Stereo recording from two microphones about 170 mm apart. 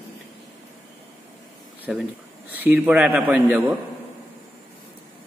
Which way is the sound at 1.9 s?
Centre (ahead or behind).